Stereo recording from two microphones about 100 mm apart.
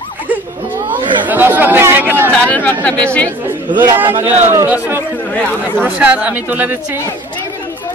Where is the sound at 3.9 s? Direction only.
20° right (ahead or behind).